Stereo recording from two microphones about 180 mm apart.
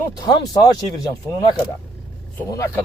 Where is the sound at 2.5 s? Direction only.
15° left (ahead or behind).